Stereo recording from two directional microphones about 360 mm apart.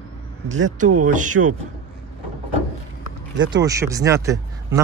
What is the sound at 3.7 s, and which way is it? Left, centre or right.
Speech, centre.